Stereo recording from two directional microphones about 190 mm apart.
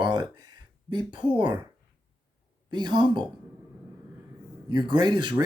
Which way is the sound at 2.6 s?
20° right (ahead or behind).